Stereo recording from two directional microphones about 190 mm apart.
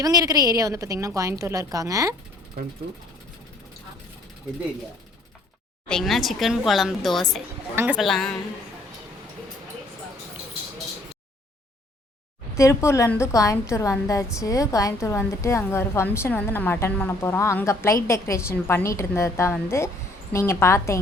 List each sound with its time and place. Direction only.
0.0 s a woman's voice: 20° right (ahead or behind)
2.6 s speech: 50° right (ahead or behind)
5.9 s a woman's voice: centre (ahead or behind)
12.5 s a woman's voice: 15° left (ahead or behind)